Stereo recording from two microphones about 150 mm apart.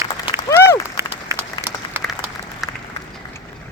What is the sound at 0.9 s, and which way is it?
Applause, 20° right (ahead or behind).